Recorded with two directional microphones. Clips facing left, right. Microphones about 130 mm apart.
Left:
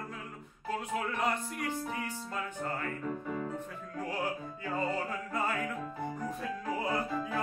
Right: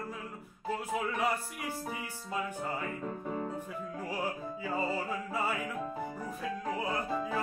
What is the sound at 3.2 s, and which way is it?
Music, 35° right (ahead or behind).